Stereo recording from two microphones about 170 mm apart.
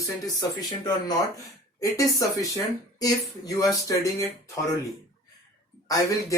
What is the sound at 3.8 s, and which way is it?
Speech, 20° left (ahead or behind).